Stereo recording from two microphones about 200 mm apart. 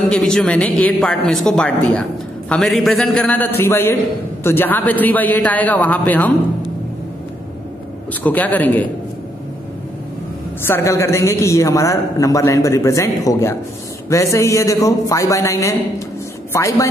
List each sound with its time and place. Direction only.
0.1 s a man's voice: 5° left (ahead or behind)
8.1 s a man's voice: 10° left (ahead or behind)
10.7 s a man's voice: 15° left (ahead or behind)